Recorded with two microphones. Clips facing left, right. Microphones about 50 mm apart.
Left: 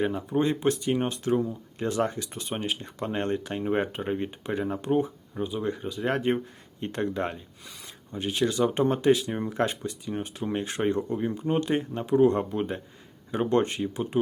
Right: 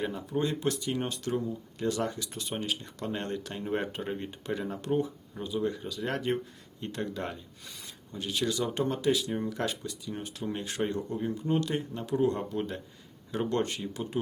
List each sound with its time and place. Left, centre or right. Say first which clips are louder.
0.2 s speech: left 5 dB; left
7.6 s speech: left 1 dB; centre
7.9 s speech: left 5 dB; left